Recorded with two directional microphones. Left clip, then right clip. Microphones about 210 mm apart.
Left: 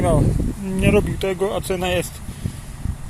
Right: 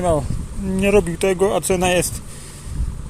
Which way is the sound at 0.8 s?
20° right (ahead or behind).